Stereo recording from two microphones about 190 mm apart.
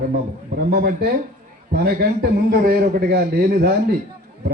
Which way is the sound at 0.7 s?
55° right (ahead or behind).